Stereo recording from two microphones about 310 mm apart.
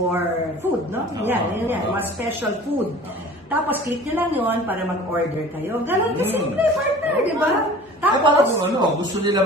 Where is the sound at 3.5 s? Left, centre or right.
Centre.